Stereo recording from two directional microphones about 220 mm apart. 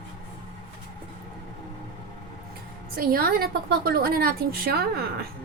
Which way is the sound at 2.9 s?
40° right (ahead or behind).